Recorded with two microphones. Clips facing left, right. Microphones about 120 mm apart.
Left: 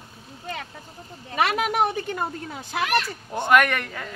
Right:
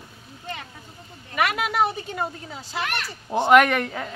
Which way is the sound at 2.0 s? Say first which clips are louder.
Left 1 dB; 60° left (ahead or behind).